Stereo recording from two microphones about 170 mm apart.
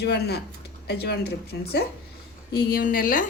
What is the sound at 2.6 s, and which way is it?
Speech, 60° left (ahead or behind).